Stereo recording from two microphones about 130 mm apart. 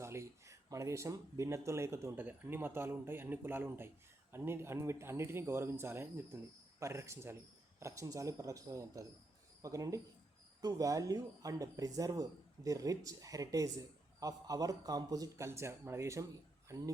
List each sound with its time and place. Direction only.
0.0 s speech: 20° right (ahead or behind)